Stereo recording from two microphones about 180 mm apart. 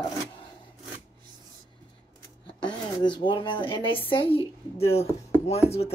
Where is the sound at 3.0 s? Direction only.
25° left (ahead or behind).